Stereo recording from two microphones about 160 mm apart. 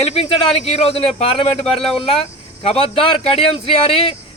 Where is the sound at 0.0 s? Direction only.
40° left (ahead or behind).